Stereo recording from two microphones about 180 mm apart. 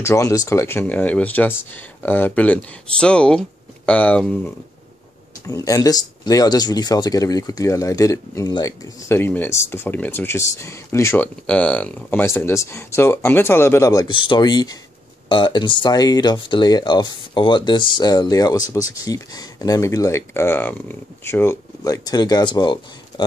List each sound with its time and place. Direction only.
0.0 s speech: 15° left (ahead or behind)
5.5 s speech: 20° left (ahead or behind)